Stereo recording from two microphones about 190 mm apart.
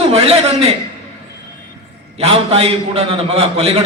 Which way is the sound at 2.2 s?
30° right (ahead or behind).